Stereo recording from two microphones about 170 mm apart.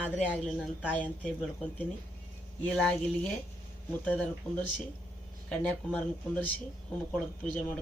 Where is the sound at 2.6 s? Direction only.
5° left (ahead or behind).